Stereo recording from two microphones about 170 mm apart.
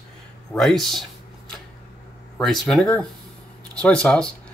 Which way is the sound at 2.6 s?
5° left (ahead or behind).